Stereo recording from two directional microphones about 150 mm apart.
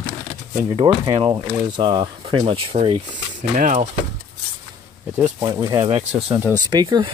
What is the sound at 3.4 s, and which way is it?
Speech, 55° right (ahead or behind).